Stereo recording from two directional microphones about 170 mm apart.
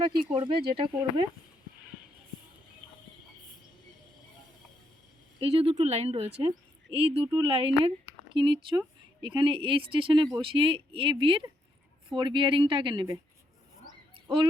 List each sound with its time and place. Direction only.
0.2 s speech: 30° right (ahead or behind)
5.4 s speech: 35° right (ahead or behind)
13.8 s a sound: 30° right (ahead or behind)